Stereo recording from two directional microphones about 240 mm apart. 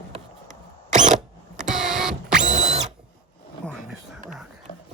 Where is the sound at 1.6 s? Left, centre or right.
Centre.